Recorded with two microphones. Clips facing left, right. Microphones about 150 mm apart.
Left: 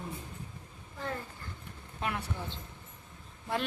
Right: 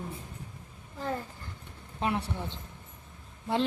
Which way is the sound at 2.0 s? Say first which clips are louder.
Right 5 dB; 30° right (ahead or behind).